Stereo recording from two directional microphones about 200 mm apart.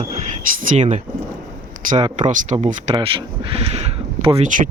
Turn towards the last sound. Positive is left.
turn(degrees=-40)  # may be behind; listen again after turning